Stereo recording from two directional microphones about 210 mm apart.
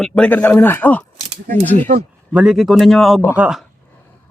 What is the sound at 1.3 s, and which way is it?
Speech, 30° right (ahead or behind).